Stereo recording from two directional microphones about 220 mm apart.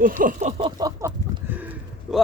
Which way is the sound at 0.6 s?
15° right (ahead or behind).